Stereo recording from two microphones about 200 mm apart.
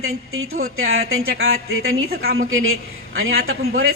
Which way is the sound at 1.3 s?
50° right (ahead or behind).